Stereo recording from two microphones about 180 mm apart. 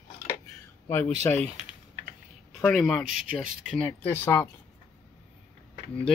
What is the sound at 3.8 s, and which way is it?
Speech, 10° left (ahead or behind).